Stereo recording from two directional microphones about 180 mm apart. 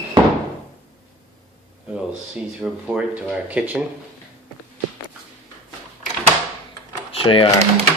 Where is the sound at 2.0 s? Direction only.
5° right (ahead or behind).